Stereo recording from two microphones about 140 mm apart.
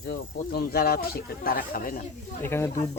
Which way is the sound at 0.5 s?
90° left.